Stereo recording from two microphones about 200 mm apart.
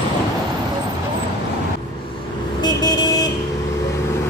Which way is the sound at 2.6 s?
20° left (ahead or behind).